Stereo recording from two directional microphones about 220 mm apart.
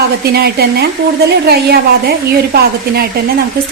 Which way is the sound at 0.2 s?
45° right (ahead or behind).